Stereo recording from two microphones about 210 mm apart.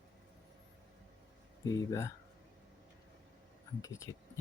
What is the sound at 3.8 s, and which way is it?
Speech, 15° left (ahead or behind).